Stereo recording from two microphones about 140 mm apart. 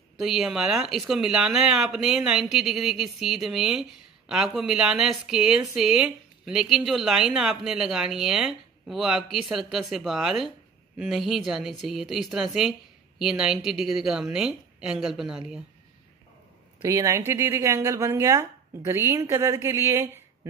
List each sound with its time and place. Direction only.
0.2 s speech: 5° right (ahead or behind)
16.8 s speech: 20° right (ahead or behind)